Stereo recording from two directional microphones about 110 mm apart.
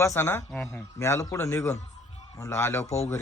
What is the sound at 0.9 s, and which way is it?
A man's voice, 25° left (ahead or behind).